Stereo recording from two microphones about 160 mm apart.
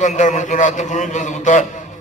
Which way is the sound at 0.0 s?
50° left (ahead or behind).